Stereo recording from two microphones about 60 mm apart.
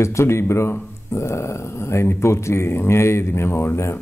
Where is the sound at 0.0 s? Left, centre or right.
Left.